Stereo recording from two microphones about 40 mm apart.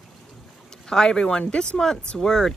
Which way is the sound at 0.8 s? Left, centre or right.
Centre.